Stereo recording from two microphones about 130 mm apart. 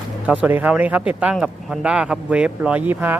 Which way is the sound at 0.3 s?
15° right (ahead or behind).